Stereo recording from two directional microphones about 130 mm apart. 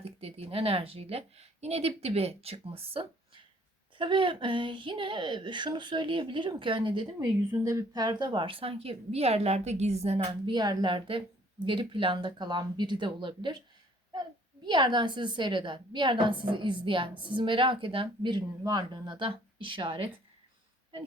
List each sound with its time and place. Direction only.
0.0 s a woman's voice: 50° right (ahead or behind)
7.5 s a woman's voice: 25° right (ahead or behind); by 10.2 s 55° right (ahead or behind)
10.4 s a woman's voice: 35° right (ahead or behind)